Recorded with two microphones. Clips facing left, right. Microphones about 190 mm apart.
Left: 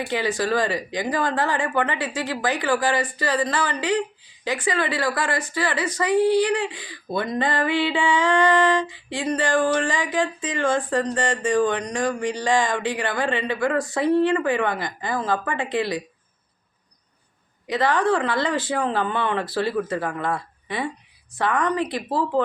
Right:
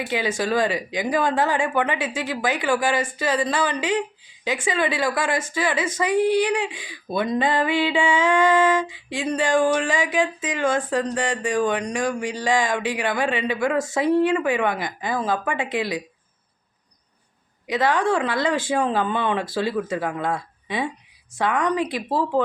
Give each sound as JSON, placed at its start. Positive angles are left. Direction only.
{"t": 0.0, "sound": "speech", "side_deg": -15}
{"t": 10.8, "sound": "speech", "side_deg": -5}
{"t": 17.7, "sound": "speech", "side_deg": -10}